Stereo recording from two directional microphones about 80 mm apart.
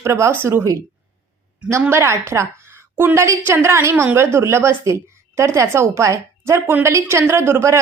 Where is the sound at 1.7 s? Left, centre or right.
Right.